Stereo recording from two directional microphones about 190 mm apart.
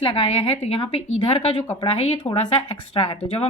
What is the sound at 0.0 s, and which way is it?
A woman's voice, 25° left (ahead or behind).